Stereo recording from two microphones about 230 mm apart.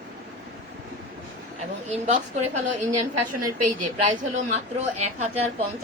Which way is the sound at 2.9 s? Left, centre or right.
Right.